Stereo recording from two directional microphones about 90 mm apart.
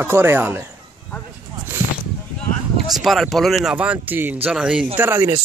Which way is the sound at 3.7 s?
15° right (ahead or behind).